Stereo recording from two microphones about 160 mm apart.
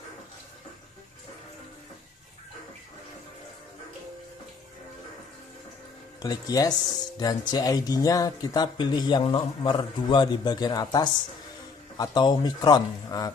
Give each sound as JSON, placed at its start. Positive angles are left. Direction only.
{"t": 6.2, "sound": "speech", "side_deg": 25}